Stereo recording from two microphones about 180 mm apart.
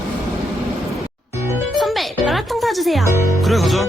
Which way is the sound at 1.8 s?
Centre (ahead or behind).